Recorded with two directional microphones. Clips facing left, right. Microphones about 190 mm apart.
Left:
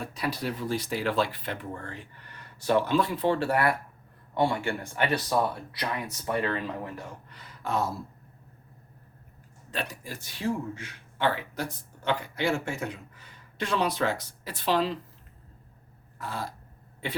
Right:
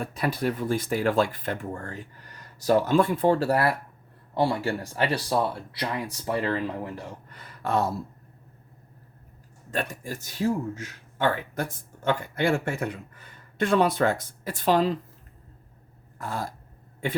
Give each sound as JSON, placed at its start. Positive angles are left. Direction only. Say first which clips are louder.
{"t": 0.0, "sound": "speech", "louder": "right 5 dB", "side_deg": -50}
{"t": 7.3, "sound": "speech", "louder": "right 4 dB", "side_deg": -55}
{"t": 9.7, "sound": "speech", "louder": "right 4 dB", "side_deg": -50}
{"t": 16.1, "sound": "a sound", "louder": "right 3 dB", "side_deg": -45}